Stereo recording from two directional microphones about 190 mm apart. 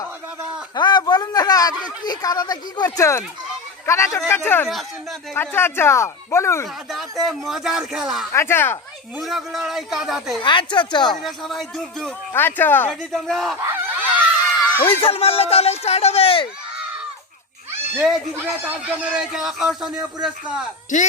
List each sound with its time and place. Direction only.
0.8 s a woman's voice: 20° left (ahead or behind)
6.9 s speech: centre (ahead or behind)
8.3 s speech: 15° left (ahead or behind)
9.1 s speech: centre (ahead or behind)
10.4 s a woman's voice: 25° left (ahead or behind)
11.2 s speech: centre (ahead or behind)
13.6 s a sound: 10° right (ahead or behind)
14.8 s speech: 30° left (ahead or behind)
17.9 s speech: 5° right (ahead or behind)